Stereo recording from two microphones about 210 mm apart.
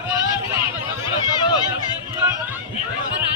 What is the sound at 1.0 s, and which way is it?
Run, 20° left (ahead or behind).